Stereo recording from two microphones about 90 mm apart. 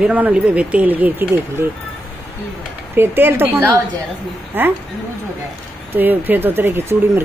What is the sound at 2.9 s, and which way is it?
Speech, 25° right (ahead or behind).